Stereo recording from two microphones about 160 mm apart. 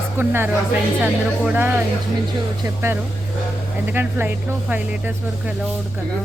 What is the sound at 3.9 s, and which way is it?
Speech, 10° right (ahead or behind).